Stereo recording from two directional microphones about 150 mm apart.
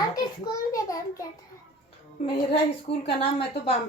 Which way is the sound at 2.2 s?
40° left (ahead or behind).